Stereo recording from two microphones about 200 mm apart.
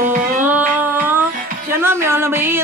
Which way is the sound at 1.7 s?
10° right (ahead or behind).